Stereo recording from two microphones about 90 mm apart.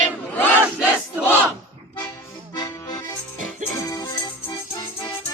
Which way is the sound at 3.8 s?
45° left (ahead or behind).